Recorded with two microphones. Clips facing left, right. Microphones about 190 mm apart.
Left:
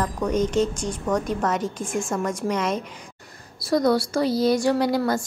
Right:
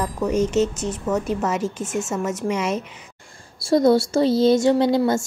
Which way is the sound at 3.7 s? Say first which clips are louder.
Right 4 dB; 25° right (ahead or behind).